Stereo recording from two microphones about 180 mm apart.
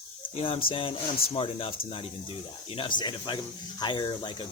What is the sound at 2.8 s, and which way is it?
Speech, 25° left (ahead or behind).